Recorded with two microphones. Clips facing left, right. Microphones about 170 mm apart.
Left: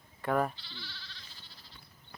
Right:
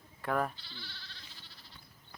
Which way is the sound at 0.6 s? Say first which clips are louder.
Left 1 dB; 50° right (ahead or behind).